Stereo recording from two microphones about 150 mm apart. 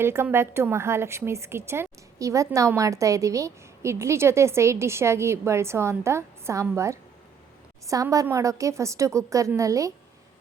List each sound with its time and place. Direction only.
0.0 s a woman's voice: 15° right (ahead or behind)